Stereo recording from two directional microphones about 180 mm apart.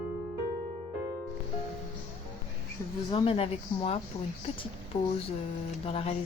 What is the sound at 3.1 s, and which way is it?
Speech, 30° left (ahead or behind).